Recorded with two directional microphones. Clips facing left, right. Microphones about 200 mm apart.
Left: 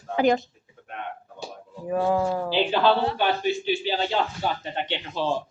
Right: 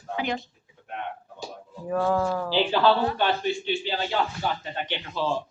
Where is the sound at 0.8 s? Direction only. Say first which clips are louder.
Right 1 dB; 50° left (ahead or behind).